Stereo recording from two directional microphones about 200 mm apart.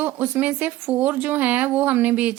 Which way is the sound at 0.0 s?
10° right (ahead or behind).